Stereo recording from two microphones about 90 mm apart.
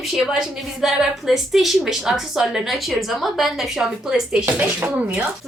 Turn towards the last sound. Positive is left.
turn(degrees=-15)  # may be behind; listen again after turning